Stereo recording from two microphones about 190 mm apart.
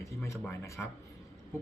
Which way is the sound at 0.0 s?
15° left (ahead or behind).